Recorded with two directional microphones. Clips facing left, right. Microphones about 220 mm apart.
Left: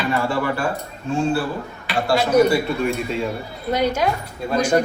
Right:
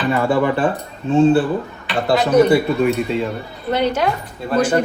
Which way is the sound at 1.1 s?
20° right (ahead or behind).